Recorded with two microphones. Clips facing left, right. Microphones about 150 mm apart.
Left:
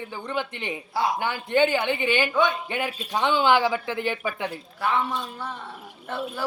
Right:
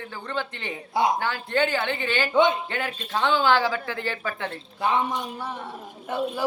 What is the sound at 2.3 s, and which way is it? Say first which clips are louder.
Speech: right 7 dB; 20° right (ahead or behind).